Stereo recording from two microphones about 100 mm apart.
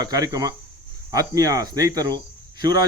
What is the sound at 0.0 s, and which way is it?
Speech, 40° right (ahead or behind).